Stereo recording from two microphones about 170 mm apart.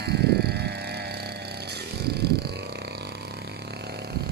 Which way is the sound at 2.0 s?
70° right (ahead or behind).